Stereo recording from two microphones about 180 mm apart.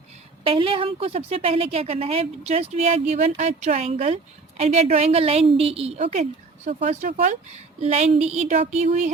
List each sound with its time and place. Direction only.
0.4 s a woman's voice: 30° right (ahead or behind)